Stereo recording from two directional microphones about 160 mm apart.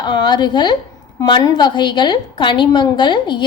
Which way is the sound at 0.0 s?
25° left (ahead or behind).